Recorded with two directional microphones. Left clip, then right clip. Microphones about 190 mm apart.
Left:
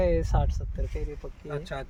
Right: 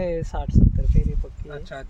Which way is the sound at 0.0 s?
Centre (ahead or behind).